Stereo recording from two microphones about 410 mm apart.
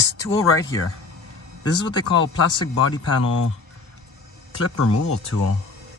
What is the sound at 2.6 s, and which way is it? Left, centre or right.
Speech, left.